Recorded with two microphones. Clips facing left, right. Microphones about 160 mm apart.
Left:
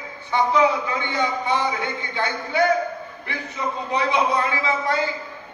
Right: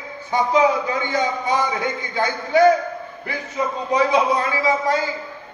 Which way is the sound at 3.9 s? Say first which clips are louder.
Right 4 dB; 40° right (ahead or behind).